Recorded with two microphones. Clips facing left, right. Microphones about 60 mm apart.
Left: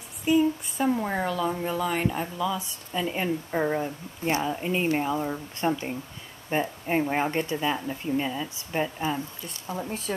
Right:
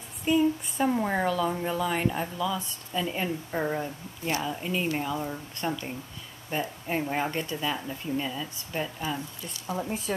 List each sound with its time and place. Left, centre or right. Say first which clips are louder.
0.2 s speech: left 2 dB; centre
4.2 s speech: left 4 dB; left
9.7 s speech: right 1 dB; centre